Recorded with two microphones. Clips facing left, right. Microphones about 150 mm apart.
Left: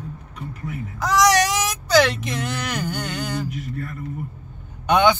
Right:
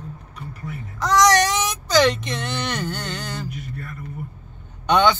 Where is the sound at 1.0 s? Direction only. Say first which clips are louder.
Right 1 dB; 5° left (ahead or behind).